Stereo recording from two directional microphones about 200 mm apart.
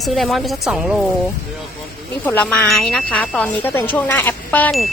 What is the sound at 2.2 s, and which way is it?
Speech, 10° left (ahead or behind).